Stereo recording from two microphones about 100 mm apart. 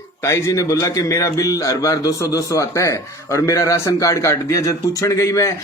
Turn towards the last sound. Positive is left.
turn(degrees=30)  # may be behind; listen again after turning